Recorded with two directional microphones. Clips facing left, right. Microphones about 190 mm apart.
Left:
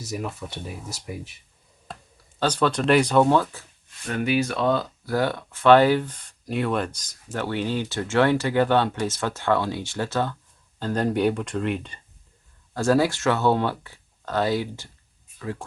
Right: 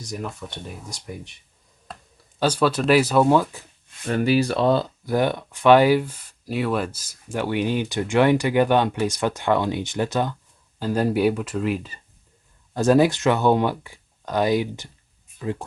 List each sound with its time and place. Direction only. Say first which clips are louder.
0.0 s speech: left 1 dB; 5° left (ahead or behind)
2.4 s speech: right 2 dB; 10° right (ahead or behind)
4.1 s speech: right 4 dB; 35° right (ahead or behind)
5.0 s speech: right 2 dB; 20° right (ahead or behind); by 11.9 s 5° right (ahead or behind)
12.7 s speech: right 3 dB; 20° right (ahead or behind)